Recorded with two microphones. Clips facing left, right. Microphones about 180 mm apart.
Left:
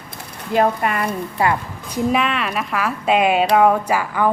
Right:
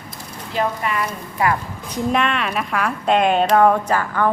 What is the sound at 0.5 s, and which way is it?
Speech, 55° left (ahead or behind).